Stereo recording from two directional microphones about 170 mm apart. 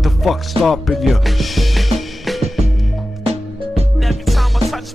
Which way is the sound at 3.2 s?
35° right (ahead or behind).